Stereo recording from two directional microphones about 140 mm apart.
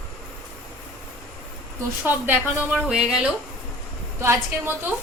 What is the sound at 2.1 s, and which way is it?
A woman's voice, 15° right (ahead or behind).